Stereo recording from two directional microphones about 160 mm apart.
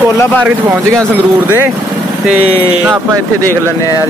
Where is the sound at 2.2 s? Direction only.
10° right (ahead or behind).